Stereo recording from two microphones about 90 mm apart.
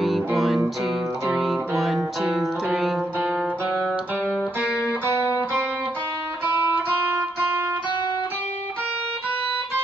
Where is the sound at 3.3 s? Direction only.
10° right (ahead or behind).